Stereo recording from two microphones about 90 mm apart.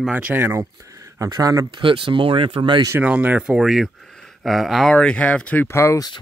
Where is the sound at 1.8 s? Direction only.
75° right (ahead or behind).